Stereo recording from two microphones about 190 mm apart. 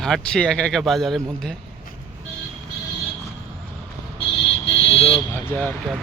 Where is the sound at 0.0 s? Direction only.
5° left (ahead or behind).